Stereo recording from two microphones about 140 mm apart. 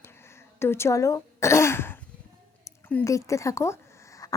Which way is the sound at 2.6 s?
15° left (ahead or behind).